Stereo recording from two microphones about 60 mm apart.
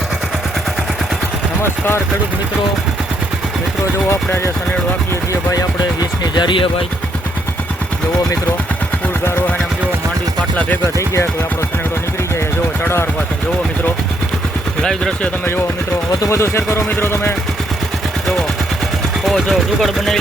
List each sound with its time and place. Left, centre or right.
5.3 s speech: left
10.9 s speech: left
12.8 s speech: left
14.8 s speech: centre
16.3 s speech: left
19.2 s speech: centre